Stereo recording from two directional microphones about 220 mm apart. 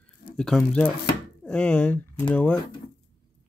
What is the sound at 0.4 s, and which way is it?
Speech, 5° left (ahead or behind).